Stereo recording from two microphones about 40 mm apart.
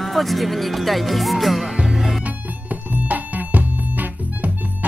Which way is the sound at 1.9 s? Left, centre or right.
Centre.